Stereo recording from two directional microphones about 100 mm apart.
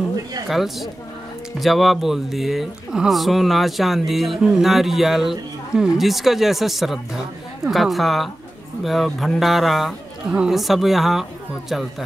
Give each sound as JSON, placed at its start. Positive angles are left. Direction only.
{"t": 0.5, "sound": "speech", "side_deg": 0}